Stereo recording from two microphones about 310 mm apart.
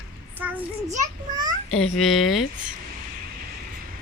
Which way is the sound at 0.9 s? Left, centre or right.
Right.